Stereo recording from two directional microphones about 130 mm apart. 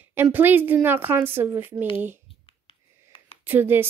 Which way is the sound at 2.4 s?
40° left (ahead or behind).